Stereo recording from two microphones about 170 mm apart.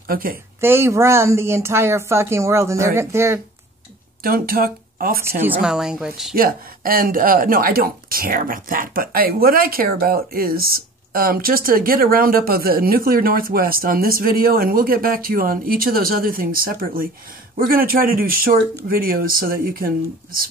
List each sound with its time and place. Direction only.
0.1 s speech: 55° right (ahead or behind)
0.6 s speech: 15° right (ahead or behind)
4.2 s speech: 60° right (ahead or behind)
5.6 s speech: 5° right (ahead or behind)
6.3 s speech: 60° right (ahead or behind)